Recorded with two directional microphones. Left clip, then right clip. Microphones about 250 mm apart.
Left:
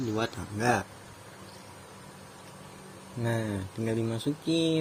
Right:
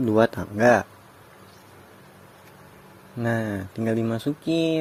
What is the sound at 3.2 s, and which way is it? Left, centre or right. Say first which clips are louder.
Speech: right 6 dB; right.